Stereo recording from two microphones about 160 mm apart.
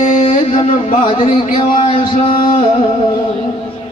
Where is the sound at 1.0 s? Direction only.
30° left (ahead or behind).